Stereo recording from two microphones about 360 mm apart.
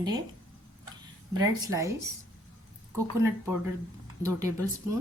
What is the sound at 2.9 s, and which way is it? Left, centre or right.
Speech, centre.